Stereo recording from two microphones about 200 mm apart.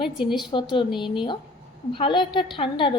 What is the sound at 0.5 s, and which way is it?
A woman's voice, 25° left (ahead or behind).